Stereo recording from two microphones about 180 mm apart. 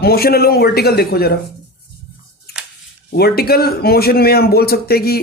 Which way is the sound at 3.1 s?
60° left (ahead or behind).